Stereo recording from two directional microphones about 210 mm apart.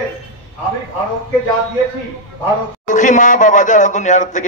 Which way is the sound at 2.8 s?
35° left (ahead or behind).